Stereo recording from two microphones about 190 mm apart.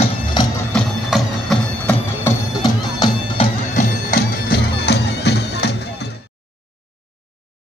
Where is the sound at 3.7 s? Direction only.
50° left (ahead or behind).